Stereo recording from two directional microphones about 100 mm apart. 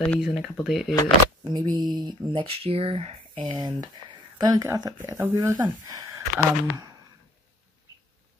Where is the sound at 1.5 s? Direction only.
45° right (ahead or behind).